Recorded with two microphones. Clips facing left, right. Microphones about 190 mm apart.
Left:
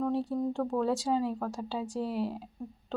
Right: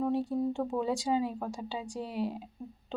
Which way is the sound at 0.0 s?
Centre (ahead or behind).